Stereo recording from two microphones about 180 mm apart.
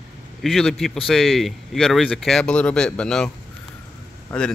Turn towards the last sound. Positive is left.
turn(degrees=5)  # may be behind; listen again after turning